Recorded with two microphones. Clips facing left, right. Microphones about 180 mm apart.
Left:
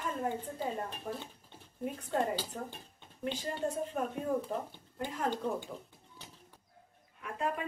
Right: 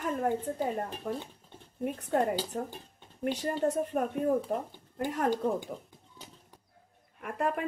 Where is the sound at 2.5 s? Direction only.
50° right (ahead or behind).